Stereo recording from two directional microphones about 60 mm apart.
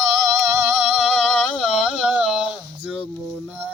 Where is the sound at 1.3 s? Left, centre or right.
Centre.